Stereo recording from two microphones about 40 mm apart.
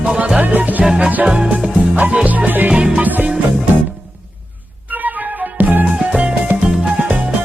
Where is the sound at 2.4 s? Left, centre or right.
Right.